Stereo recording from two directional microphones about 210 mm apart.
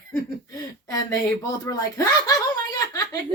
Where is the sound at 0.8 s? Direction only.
15° left (ahead or behind).